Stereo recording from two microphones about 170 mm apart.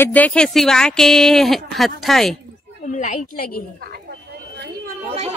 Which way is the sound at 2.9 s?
45° left (ahead or behind).